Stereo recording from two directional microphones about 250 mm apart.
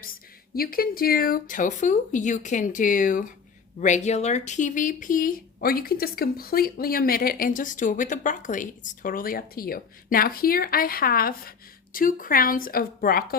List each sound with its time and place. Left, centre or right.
0.0 s speech: left